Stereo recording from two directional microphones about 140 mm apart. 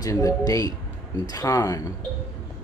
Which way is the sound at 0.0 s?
25° left (ahead or behind).